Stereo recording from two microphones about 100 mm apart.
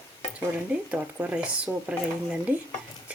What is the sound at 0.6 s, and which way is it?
Speech, 15° right (ahead or behind).